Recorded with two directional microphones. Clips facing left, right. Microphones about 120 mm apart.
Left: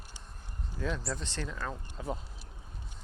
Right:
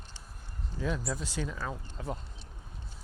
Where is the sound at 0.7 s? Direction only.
5° right (ahead or behind).